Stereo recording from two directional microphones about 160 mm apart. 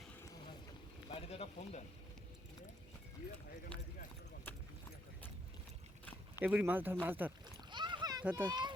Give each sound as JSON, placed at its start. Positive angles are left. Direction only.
{"t": 1.1, "sound": "speech", "side_deg": 40}
{"t": 3.7, "sound": "speech", "side_deg": 5}
{"t": 6.4, "sound": "speech", "side_deg": -10}
{"t": 7.7, "sound": "rowboat", "side_deg": -30}
{"t": 8.2, "sound": "speech", "side_deg": -10}
{"t": 8.4, "sound": "speech", "side_deg": -25}